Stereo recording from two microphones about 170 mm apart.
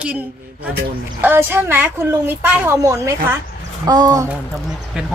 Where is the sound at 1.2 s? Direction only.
15° right (ahead or behind).